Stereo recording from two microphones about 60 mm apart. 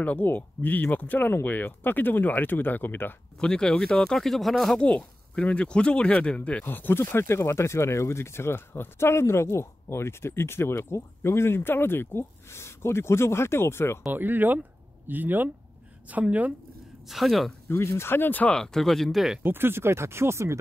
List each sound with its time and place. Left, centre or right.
0.0 s speech: left
3.3 s speech: centre
4.7 s speech: centre
6.6 s speech: left
14.1 s speech: right
17.1 s speech: centre
17.6 s speech: left
18.5 s speech: centre
19.1 s speech: centre
19.4 s speech: right